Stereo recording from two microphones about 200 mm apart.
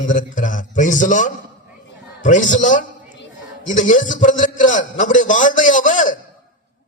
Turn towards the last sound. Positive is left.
turn(degrees=40)  # may be behind; listen again after turning